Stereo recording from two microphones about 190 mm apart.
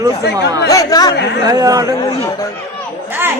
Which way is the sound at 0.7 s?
20° left (ahead or behind).